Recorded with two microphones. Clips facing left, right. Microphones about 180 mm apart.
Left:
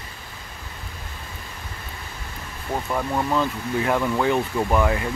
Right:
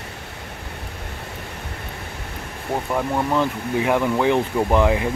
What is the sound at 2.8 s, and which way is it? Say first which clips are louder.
Speech: right 2 dB; 15° right (ahead or behind).